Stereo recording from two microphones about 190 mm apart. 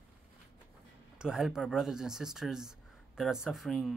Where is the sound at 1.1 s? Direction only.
5° right (ahead or behind).